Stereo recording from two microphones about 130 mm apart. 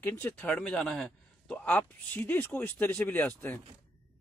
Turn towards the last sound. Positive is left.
turn(degrees=15)  # may be behind; listen again after turning